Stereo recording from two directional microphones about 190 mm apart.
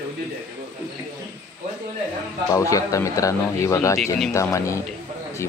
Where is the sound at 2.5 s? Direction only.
15° left (ahead or behind).